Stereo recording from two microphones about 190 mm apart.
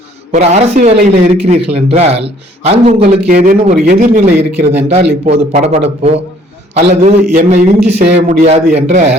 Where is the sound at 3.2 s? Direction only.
45° right (ahead or behind).